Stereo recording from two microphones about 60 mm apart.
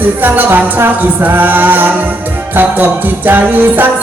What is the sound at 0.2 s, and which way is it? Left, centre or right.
Music, right.